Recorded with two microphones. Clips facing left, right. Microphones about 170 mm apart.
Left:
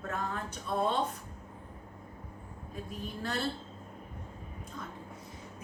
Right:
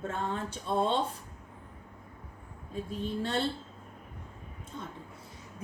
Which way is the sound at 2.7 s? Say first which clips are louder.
Right 6 dB; 30° right (ahead or behind).